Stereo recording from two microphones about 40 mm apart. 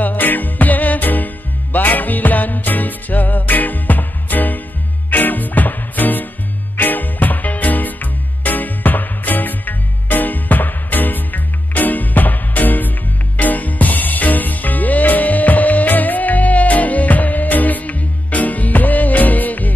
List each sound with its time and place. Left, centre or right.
0.0 s music: left